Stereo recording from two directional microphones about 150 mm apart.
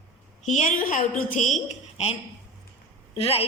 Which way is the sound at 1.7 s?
45° left (ahead or behind).